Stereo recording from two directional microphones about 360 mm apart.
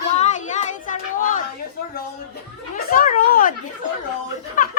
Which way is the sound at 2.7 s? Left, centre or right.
Left.